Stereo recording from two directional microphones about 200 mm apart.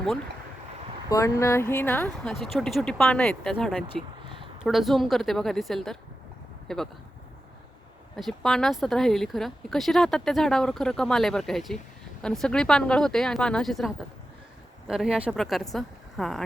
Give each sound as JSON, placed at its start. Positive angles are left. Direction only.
{"t": 1.1, "sound": "speech", "side_deg": 15}
{"t": 8.1, "sound": "a woman's voice", "side_deg": 0}